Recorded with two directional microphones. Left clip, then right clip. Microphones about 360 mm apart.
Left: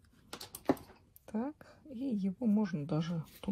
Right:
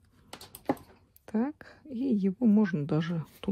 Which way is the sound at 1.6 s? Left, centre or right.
Right.